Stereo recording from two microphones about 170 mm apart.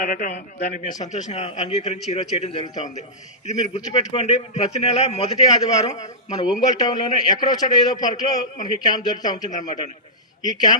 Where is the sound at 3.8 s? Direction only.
25° left (ahead or behind).